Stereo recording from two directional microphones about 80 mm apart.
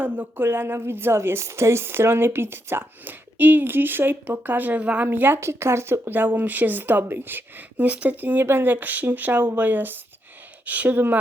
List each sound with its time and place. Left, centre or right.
0.0 s speech: right